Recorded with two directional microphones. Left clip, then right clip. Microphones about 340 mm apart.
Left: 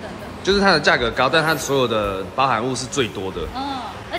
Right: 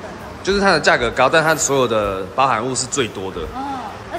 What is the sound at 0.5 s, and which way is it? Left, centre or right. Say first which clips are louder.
Speech: right 1 dB; centre.